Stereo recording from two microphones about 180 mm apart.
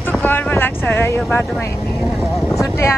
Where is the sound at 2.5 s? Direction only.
15° left (ahead or behind).